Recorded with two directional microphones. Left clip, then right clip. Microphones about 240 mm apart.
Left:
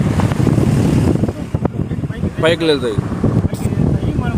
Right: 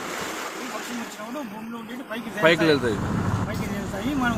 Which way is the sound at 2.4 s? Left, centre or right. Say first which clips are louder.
Left 5 dB; left.